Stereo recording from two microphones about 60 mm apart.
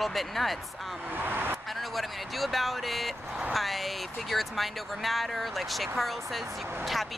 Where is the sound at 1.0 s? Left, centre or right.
Right.